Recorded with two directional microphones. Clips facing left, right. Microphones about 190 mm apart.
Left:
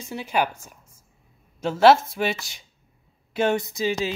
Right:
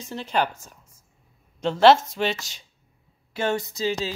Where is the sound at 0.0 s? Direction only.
10° left (ahead or behind).